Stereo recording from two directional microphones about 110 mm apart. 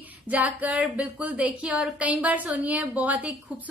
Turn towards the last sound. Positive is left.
turn(degrees=-15)  # may be behind; listen again after turning